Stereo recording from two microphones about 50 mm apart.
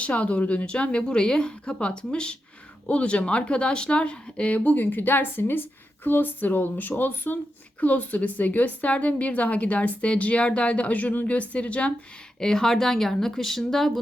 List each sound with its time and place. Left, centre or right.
0.0 s a woman's voice: left
12.4 s speech: centre